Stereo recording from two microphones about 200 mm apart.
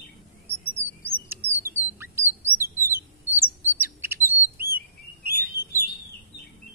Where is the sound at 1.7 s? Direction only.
10° right (ahead or behind).